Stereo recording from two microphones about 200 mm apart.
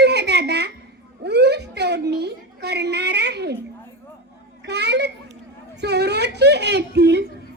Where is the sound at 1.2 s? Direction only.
55° right (ahead or behind).